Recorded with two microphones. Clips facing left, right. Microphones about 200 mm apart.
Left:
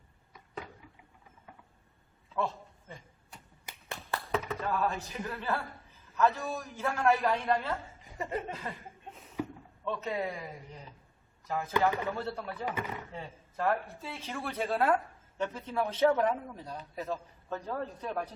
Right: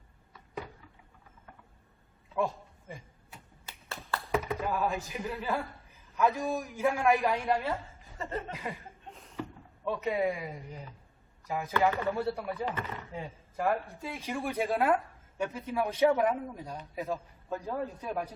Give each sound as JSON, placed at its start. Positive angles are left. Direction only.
{"t": 2.3, "sound": "a sound", "side_deg": -15}
{"t": 3.7, "sound": "clapping", "side_deg": 15}
{"t": 4.3, "sound": "speech", "side_deg": -10}
{"t": 8.0, "sound": "speech", "side_deg": 15}
{"t": 9.1, "sound": "a sound", "side_deg": 5}
{"t": 9.8, "sound": "speech", "side_deg": -10}